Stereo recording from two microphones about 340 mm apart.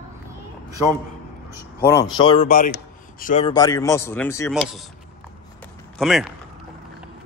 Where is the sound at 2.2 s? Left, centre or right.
Centre.